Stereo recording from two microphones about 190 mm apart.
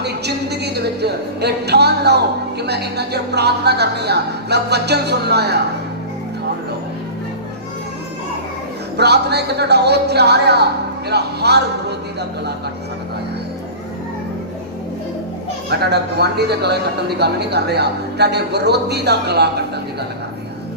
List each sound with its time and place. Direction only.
0.0 s a woman's voice: 60° right (ahead or behind)
9.0 s speech: 60° right (ahead or behind)
15.8 s speech: 60° right (ahead or behind)